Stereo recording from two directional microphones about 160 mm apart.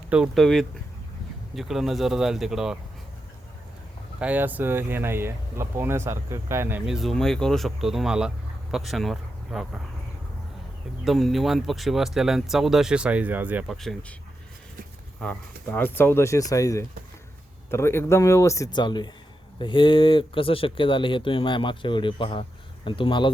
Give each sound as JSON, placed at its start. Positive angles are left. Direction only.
{"t": 0.1, "sound": "speech", "side_deg": 0}
{"t": 4.2, "sound": "speech", "side_deg": -10}
{"t": 11.0, "sound": "speech", "side_deg": 0}
{"t": 15.2, "sound": "speech", "side_deg": 10}